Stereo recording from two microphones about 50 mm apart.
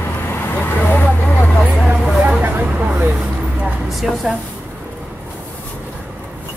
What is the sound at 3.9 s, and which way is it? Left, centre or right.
Speech, centre.